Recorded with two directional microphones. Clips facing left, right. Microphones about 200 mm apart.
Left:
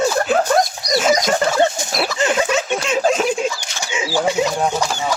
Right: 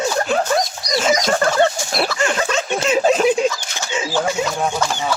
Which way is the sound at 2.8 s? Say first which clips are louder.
Right 5 dB; centre (ahead or behind).